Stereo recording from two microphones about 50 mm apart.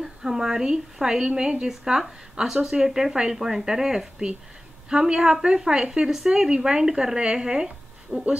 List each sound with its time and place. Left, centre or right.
0.0 s speech: centre